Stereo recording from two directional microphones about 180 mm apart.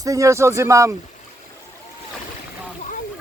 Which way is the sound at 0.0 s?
20° right (ahead or behind).